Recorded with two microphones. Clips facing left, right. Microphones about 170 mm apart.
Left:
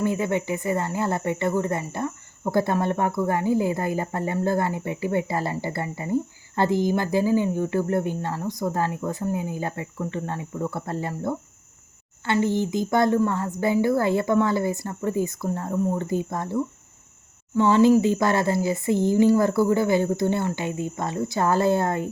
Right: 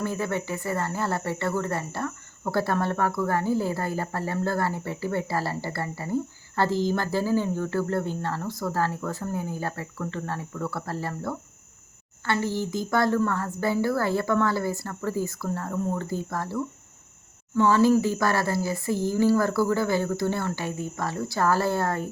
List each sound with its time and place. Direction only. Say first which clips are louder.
0.0 s speech: left 4 dB; 20° left (ahead or behind)